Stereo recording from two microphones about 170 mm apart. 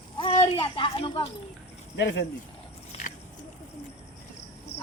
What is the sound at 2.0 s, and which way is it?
Speech, 90° left.